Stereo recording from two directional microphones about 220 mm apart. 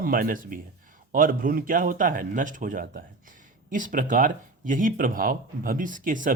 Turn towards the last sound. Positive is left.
turn(degrees=-35)  # may be behind; listen again after turning